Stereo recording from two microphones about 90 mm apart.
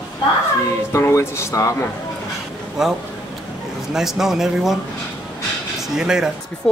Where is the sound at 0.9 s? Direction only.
30° left (ahead or behind).